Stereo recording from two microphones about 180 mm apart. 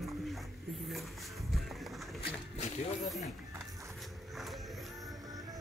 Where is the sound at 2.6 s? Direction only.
40° left (ahead or behind).